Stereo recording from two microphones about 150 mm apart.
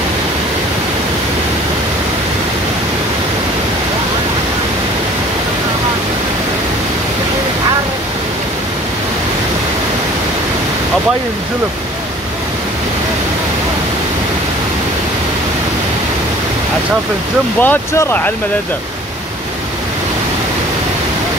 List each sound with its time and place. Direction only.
17.6 s speech: 15° left (ahead or behind)